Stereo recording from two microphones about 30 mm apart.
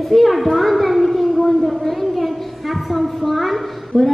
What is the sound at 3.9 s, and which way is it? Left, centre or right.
Speech, left.